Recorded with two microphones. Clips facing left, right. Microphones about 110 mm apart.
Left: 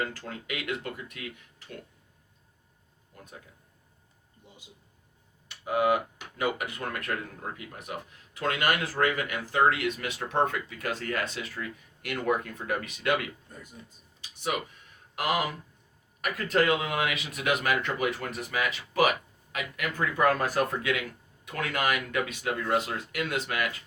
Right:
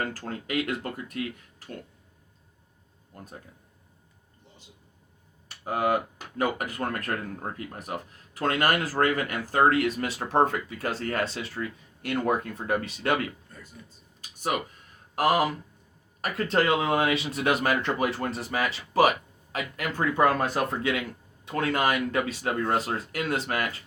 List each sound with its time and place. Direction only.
0.0 s speech: 40° right (ahead or behind)
3.1 s speech: 40° right (ahead or behind)
5.5 s speech: 40° right (ahead or behind)
13.5 s speech: 15° left (ahead or behind)
14.2 s a sound: 45° right (ahead or behind)
15.1 s speech: 40° right (ahead or behind)